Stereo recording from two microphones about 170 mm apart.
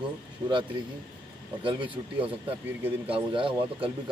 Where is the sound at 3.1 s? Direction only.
30° right (ahead or behind).